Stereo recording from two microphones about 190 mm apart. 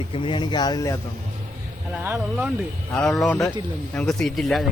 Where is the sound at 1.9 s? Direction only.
10° right (ahead or behind).